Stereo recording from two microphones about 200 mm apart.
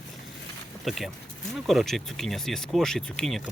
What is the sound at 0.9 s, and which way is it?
Speech, centre (ahead or behind).